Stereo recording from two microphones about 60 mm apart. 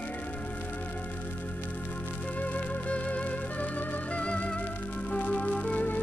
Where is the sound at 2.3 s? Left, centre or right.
Left.